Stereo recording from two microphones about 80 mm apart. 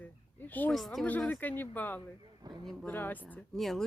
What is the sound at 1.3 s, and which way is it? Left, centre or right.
Speech, left.